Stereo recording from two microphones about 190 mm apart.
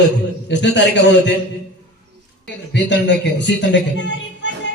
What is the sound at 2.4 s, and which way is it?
A man's voice, 65° left (ahead or behind).